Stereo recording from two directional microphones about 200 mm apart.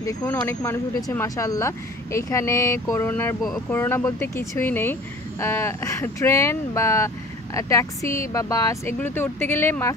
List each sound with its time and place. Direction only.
0.0 s speech: 15° left (ahead or behind)